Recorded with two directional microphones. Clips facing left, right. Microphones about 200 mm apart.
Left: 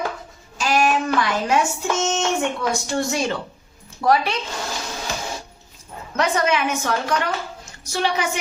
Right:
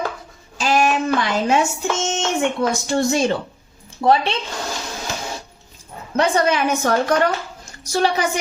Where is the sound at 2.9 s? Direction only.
40° right (ahead or behind).